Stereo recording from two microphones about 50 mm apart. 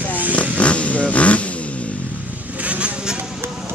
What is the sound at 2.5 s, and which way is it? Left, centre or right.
Vehicle, right.